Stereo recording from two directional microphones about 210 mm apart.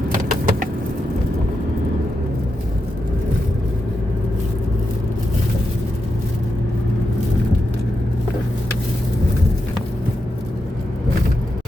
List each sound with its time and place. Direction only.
0.1 s vehicle: 40° right (ahead or behind)